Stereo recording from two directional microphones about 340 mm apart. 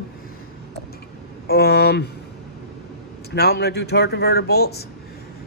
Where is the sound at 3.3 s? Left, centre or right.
Left.